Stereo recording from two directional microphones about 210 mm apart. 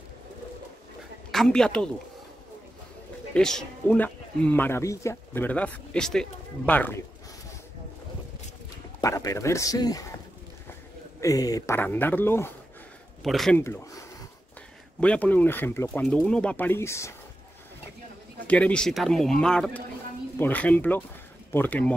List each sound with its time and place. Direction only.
1.3 s speech: centre (ahead or behind)
3.3 s speech: 5° left (ahead or behind)
9.0 s speech: 15° left (ahead or behind)
11.1 s speech: 15° left (ahead or behind); by 13.6 s centre (ahead or behind)
13.6 s speech: 10° left (ahead or behind)
15.0 s speech: 5° left (ahead or behind)
18.5 s speech: 5° left (ahead or behind)